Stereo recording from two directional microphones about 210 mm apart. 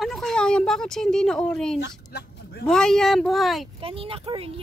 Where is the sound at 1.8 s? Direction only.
50° left (ahead or behind).